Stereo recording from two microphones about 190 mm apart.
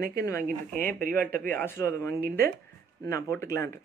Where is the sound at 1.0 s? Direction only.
50° right (ahead or behind).